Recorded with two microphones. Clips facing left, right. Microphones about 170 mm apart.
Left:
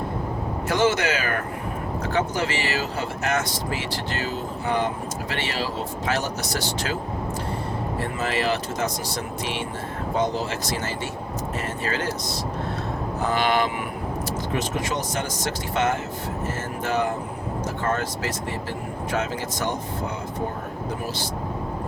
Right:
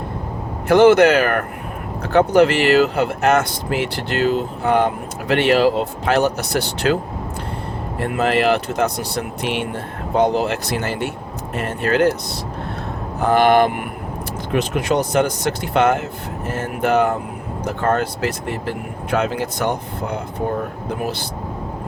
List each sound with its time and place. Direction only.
0.7 s speech: 60° right (ahead or behind)
8.1 s speech: 60° right (ahead or behind)
13.2 s speech: 55° right (ahead or behind)